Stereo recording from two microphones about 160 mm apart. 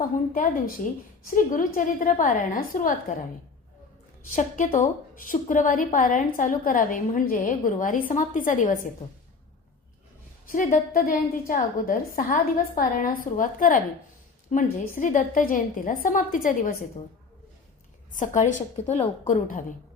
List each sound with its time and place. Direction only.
1.2 s a woman's voice: 55° left (ahead or behind)
4.4 s a woman's voice: 50° left (ahead or behind)
10.4 s a woman's voice: 55° left (ahead or behind)
18.1 s a woman's voice: 50° left (ahead or behind)
19.3 s a woman's voice: 50° left (ahead or behind)